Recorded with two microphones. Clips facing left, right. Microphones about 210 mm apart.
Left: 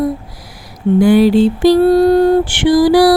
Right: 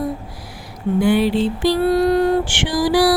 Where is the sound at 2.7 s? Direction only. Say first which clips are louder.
Left 8 dB; 60° left (ahead or behind).